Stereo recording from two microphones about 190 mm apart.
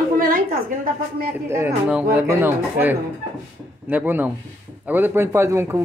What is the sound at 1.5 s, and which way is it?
A man's voice, 10° right (ahead or behind).